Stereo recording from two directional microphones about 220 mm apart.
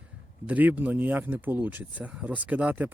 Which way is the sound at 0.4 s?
5° right (ahead or behind).